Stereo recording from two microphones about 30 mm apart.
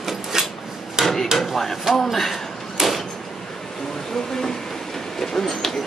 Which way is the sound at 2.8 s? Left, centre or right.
Centre.